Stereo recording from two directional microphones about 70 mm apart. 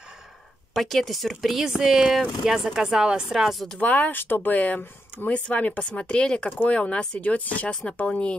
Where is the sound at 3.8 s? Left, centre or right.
Left.